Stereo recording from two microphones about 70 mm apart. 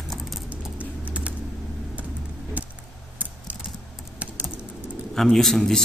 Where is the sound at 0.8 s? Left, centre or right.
Centre.